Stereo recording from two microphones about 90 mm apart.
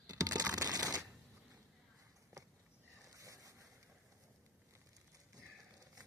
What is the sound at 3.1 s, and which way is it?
Boat, 40° right (ahead or behind).